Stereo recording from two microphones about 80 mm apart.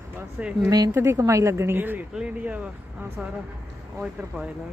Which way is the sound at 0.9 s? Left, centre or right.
Right.